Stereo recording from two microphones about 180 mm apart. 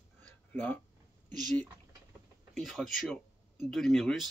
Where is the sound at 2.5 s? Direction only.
Centre (ahead or behind).